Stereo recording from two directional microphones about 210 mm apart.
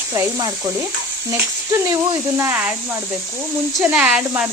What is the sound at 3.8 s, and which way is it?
Speech, 5° right (ahead or behind).